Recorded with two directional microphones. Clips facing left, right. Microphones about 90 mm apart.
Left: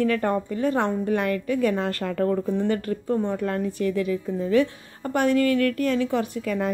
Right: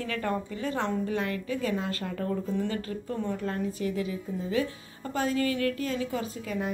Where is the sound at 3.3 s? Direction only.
60° left (ahead or behind).